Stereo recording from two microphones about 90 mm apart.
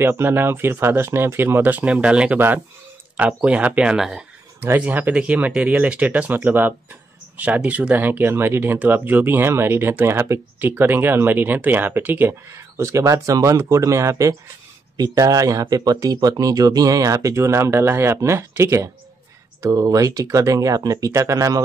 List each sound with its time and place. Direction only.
0.0 s speech: 25° right (ahead or behind); by 4.2 s 5° right (ahead or behind)
4.6 s speech: 20° right (ahead or behind); by 21.6 s 35° right (ahead or behind)